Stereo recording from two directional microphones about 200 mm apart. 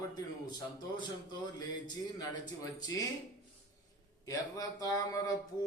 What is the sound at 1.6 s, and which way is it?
Mantra, 20° left (ahead or behind).